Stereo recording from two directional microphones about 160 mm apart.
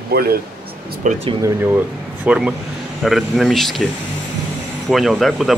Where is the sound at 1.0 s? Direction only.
50° right (ahead or behind).